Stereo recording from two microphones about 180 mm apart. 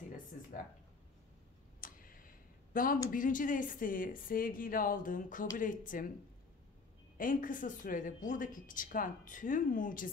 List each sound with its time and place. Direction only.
1.8 s tick: 50° left (ahead or behind)
2.7 s a woman's voice: 50° left (ahead or behind)
7.2 s a woman's voice: 50° left (ahead or behind)